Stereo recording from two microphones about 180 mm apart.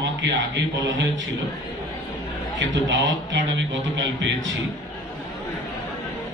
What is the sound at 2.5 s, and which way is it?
A man's voice, 90° right.